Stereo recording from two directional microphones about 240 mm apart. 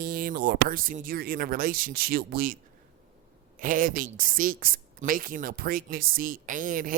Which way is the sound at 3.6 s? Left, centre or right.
Right.